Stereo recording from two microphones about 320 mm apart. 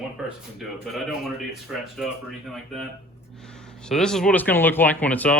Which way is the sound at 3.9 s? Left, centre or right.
Centre.